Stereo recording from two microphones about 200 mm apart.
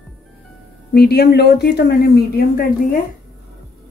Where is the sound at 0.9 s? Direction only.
55° left (ahead or behind).